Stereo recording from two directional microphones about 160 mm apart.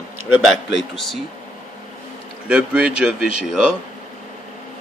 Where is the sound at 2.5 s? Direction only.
5° right (ahead or behind).